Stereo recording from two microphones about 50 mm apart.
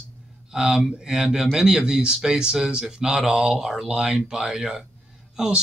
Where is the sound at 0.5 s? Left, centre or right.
Centre.